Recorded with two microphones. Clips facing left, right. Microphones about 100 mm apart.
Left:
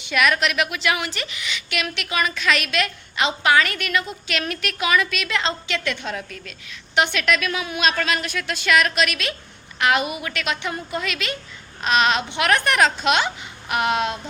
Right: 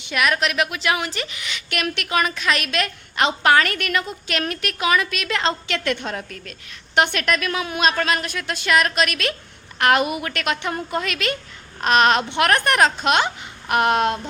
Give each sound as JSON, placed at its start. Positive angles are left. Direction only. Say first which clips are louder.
{"t": 0.1, "sound": "a woman's voice", "louder": "left 1 dB", "side_deg": -30}